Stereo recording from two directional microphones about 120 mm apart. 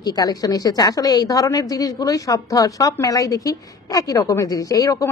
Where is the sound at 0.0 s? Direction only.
30° left (ahead or behind).